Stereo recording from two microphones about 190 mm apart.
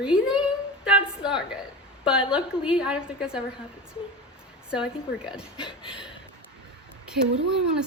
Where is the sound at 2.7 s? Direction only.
5° right (ahead or behind).